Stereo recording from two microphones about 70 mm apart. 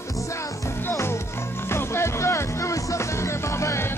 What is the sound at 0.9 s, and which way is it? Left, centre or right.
Music, left.